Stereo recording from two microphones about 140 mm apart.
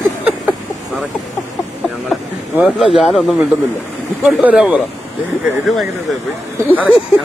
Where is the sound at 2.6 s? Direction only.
Centre (ahead or behind).